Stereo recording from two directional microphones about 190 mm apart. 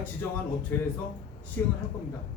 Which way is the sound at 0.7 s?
10° left (ahead or behind).